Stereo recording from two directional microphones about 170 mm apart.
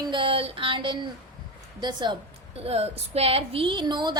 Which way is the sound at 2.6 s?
35° right (ahead or behind).